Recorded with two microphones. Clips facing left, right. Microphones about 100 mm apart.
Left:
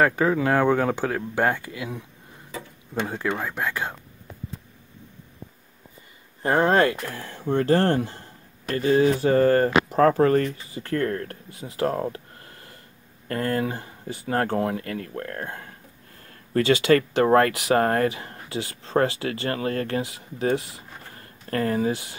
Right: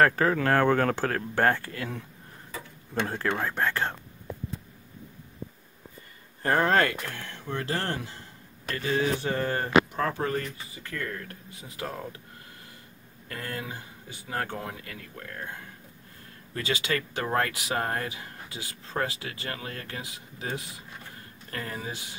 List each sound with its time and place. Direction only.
0.0 s speech: 15° left (ahead or behind)
3.1 s speech: 5° left (ahead or behind)
6.4 s speech: 25° left (ahead or behind)
7.5 s speech: 50° left (ahead or behind)
8.6 s speech: 35° left (ahead or behind)
10.7 s speech: 35° left (ahead or behind)
13.3 s speech: 45° left (ahead or behind)